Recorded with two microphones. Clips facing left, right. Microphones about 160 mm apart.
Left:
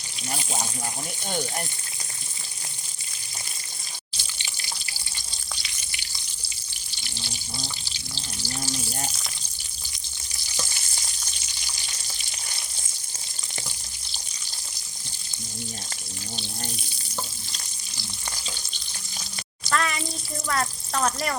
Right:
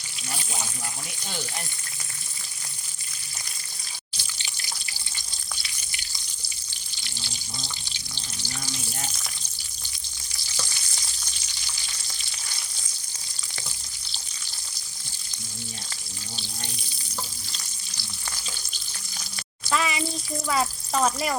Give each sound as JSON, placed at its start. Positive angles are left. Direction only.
{"t": 0.3, "sound": "water", "side_deg": 30}
{"t": 11.9, "sound": "frying", "side_deg": 20}
{"t": 19.6, "sound": "a sound", "side_deg": -5}
{"t": 20.5, "sound": "speech", "side_deg": -5}